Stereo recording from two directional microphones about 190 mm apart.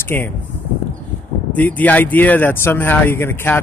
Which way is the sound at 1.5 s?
10° left (ahead or behind).